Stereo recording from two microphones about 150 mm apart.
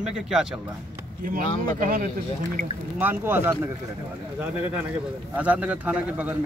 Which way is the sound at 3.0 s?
15° right (ahead or behind).